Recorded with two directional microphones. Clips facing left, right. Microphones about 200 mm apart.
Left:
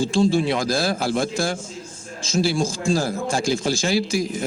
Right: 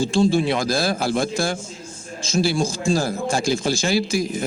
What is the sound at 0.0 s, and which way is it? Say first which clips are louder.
A man's voice: right 1 dB; 60° right (ahead or behind).